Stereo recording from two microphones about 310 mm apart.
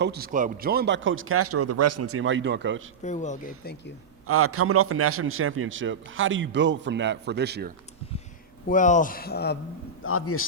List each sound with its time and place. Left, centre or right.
0.0 s a man's voice: right
3.0 s speech: left
4.3 s a man's voice: right
8.6 s speech: left
10.0 s a man's voice: left